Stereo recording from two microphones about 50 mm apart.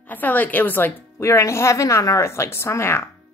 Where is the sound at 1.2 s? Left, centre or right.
Left.